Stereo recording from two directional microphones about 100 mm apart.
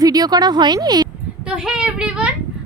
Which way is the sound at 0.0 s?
40° right (ahead or behind).